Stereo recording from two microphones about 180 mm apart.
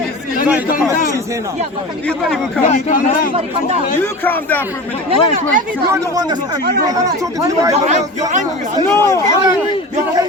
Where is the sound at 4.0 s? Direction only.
10° left (ahead or behind).